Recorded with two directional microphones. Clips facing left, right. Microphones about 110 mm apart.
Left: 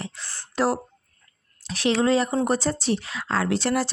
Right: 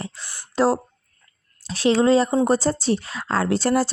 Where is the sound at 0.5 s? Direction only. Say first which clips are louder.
Right 4 dB; 30° right (ahead or behind).